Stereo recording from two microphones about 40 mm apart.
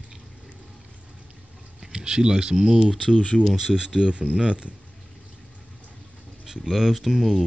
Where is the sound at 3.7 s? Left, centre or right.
Centre.